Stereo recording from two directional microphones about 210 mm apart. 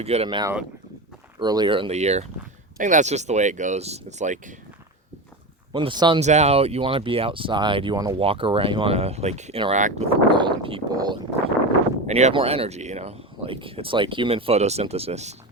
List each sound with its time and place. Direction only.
0.0 s speech: 30° right (ahead or behind)
5.7 s speech: 20° right (ahead or behind)
6.2 s speech: 30° right (ahead or behind)
12.0 s speech: 30° right (ahead or behind)